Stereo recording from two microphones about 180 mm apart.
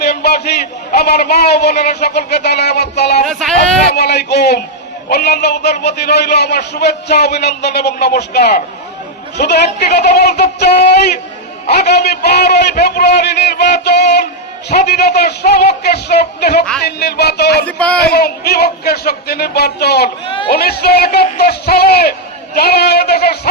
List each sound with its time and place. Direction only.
0.0 s a man's voice: 60° left (ahead or behind)
3.2 s a sound: centre (ahead or behind)
3.9 s a man's voice: 65° left (ahead or behind)
17.7 s speech: 5° left (ahead or behind)
18.0 s a man's voice: 60° left (ahead or behind)
20.2 s speech: 30° left (ahead or behind)
20.5 s a man's voice: 60° left (ahead or behind)